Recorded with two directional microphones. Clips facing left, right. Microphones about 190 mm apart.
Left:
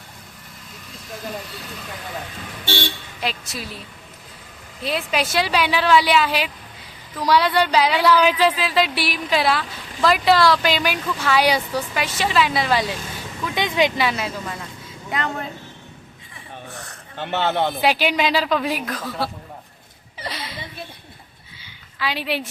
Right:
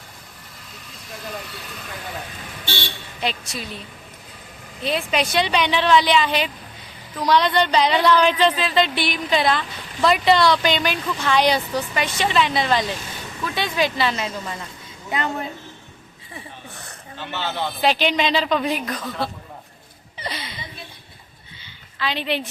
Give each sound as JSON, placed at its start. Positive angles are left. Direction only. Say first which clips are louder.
{"t": 3.2, "sound": "speech", "louder": "right 2 dB", "side_deg": 5}
{"t": 4.8, "sound": "speech", "louder": "right 1 dB", "side_deg": 5}
{"t": 15.1, "sound": "speech", "louder": "right 1 dB", "side_deg": -5}
{"t": 17.2, "sound": "speech", "louder": "left 6 dB", "side_deg": 60}
{"t": 17.7, "sound": "speech", "louder": "even", "side_deg": 10}
{"t": 20.1, "sound": "chuckle", "louder": "even", "side_deg": 0}
{"t": 21.6, "sound": "a sound", "louder": "even", "side_deg": 10}